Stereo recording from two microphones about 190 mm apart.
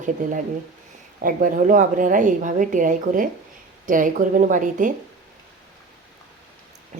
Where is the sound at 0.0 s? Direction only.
40° right (ahead or behind).